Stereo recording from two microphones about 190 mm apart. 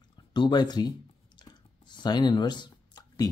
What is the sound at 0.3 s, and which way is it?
Speech, 25° left (ahead or behind).